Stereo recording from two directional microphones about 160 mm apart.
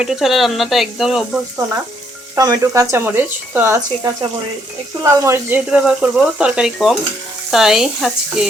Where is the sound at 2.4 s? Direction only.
20° right (ahead or behind).